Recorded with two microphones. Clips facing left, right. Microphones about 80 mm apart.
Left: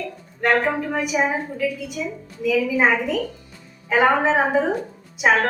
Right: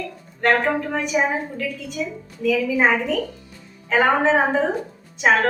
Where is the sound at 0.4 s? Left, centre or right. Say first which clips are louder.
Right 1 dB; centre.